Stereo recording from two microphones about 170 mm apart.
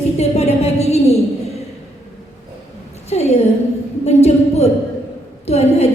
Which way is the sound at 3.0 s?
40° left (ahead or behind).